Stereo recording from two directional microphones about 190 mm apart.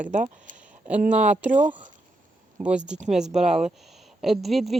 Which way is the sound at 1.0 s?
40° right (ahead or behind).